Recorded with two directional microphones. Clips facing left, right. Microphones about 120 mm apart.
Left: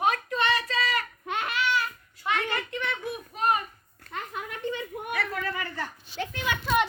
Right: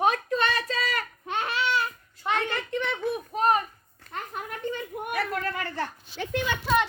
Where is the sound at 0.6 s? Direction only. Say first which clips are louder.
Left 1 dB; centre (ahead or behind).